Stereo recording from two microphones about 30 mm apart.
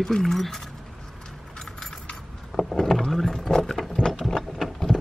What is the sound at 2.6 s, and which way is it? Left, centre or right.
Rowboat, centre.